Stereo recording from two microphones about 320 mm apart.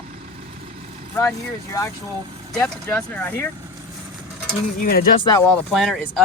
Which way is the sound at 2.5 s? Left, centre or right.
Centre.